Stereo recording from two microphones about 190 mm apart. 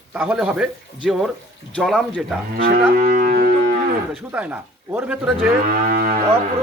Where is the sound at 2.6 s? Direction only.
45° right (ahead or behind).